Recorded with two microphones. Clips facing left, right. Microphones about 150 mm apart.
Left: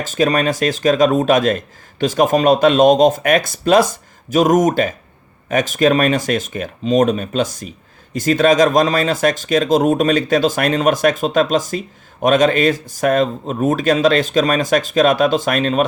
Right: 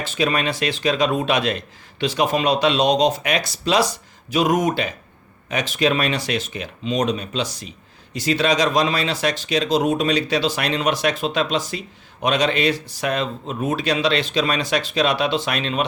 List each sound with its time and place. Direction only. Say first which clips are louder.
0.0 s speech: left 5 dB; 45° left (ahead or behind)